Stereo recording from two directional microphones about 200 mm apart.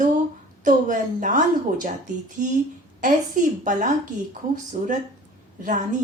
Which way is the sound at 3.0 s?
40° right (ahead or behind).